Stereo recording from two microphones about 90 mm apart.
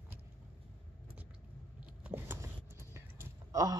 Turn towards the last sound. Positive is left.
turn(degrees=-40)  # may be behind; listen again after turning